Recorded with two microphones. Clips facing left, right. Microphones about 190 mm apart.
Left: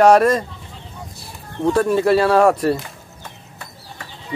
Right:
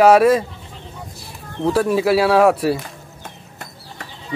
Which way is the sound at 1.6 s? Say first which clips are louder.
Left 1 dB; 5° right (ahead or behind).